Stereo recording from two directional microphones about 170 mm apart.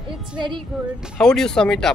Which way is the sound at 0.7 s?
Centre (ahead or behind).